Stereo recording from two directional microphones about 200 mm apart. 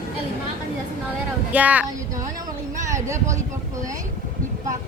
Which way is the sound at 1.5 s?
5° right (ahead or behind).